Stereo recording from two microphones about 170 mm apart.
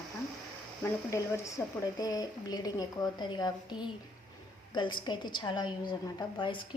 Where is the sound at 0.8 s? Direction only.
15° left (ahead or behind).